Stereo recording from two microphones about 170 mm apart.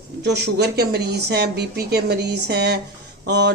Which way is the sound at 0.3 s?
75° right (ahead or behind).